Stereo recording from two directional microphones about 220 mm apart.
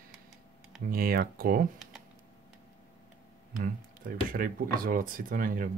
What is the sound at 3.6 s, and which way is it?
Speech, 40° right (ahead or behind).